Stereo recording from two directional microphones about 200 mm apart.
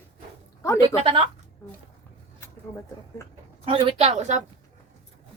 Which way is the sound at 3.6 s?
30° right (ahead or behind).